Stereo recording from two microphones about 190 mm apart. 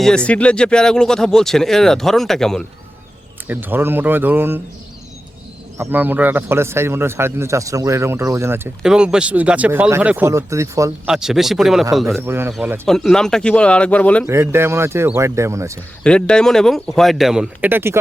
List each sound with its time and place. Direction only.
0.3 s speech: 5° left (ahead or behind)
3.4 s speech: 10° right (ahead or behind)
5.7 s speech: 10° right (ahead or behind)
11.0 s speech: 5° right (ahead or behind)
12.2 s speech: 10° right (ahead or behind); by 14.3 s 5° left (ahead or behind)
14.3 s speech: 15° right (ahead or behind)
16.0 s speech: 5° left (ahead or behind); by 17.9 s 10° right (ahead or behind)